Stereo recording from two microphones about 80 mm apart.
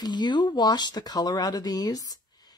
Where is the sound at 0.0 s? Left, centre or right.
Left.